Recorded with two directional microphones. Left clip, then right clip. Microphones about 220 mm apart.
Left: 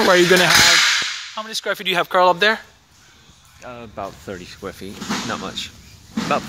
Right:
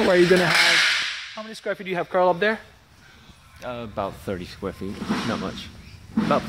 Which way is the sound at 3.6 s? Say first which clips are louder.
Right 2 dB; 55° right (ahead or behind).